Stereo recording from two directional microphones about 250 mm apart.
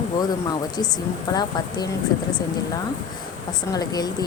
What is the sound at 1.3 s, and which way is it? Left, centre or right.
Speech, centre.